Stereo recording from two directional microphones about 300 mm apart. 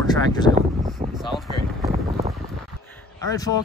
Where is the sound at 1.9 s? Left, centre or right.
Right.